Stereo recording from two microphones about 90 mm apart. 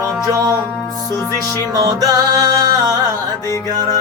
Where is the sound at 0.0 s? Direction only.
40° right (ahead or behind).